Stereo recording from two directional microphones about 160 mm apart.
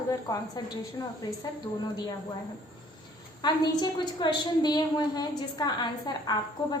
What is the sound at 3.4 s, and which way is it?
A woman's voice, 25° left (ahead or behind).